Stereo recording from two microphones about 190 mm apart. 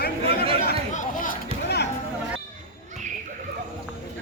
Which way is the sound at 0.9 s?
40° left (ahead or behind).